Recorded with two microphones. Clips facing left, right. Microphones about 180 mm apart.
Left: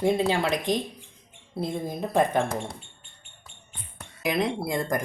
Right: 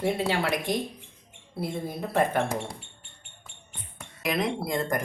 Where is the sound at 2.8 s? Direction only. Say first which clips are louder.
Right 1 dB; 70° right (ahead or behind).